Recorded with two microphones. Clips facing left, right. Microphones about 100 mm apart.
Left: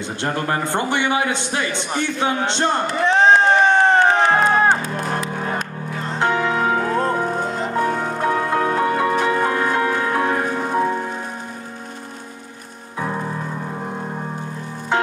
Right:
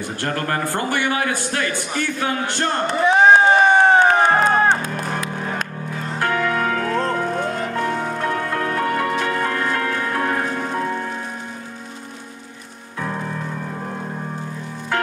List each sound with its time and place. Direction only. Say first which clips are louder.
0.2 s a man's voice: left 1 dB; 20° left (ahead or behind)
3.0 s music: right 2 dB; 10° right (ahead or behind)
4.5 s music: even; 5° left (ahead or behind)
5.1 s music: left 2 dB; 35° left (ahead or behind)
6.0 s music: left 2 dB; 20° left (ahead or behind)